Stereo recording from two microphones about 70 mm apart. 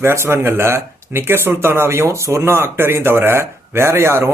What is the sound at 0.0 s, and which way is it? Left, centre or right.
Speech, right.